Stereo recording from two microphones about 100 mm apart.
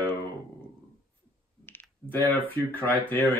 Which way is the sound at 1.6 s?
20° left (ahead or behind).